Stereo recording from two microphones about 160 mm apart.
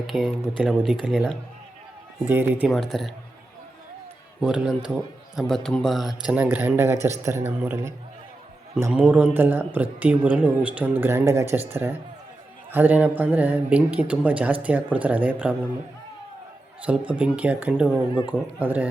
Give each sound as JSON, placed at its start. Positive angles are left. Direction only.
{"t": 0.1, "sound": "a man's voice", "side_deg": 0}
{"t": 4.4, "sound": "a man's voice", "side_deg": -5}
{"t": 16.8, "sound": "speech", "side_deg": -10}
{"t": 18.1, "sound": "speech", "side_deg": 30}
{"t": 18.6, "sound": "speech", "side_deg": -10}